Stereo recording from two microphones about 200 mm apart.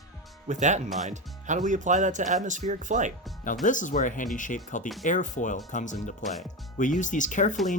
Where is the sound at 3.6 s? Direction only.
40° left (ahead or behind).